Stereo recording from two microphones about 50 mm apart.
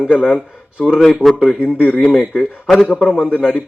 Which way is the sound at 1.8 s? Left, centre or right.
Left.